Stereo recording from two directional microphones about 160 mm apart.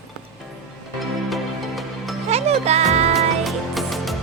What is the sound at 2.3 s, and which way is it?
Music, 40° right (ahead or behind).